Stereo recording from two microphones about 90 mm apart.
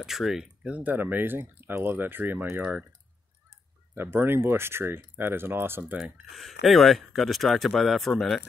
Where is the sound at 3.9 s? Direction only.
25° right (ahead or behind).